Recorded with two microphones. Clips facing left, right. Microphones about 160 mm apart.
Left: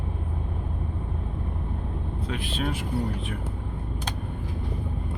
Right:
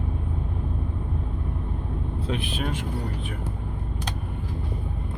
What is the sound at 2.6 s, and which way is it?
Speech, 10° left (ahead or behind).